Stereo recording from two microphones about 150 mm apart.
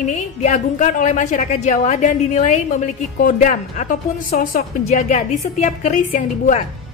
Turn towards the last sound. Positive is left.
turn(degrees=60)  # may be behind; listen again after turning